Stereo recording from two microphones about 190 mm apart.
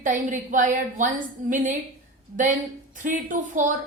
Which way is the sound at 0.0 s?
45° right (ahead or behind).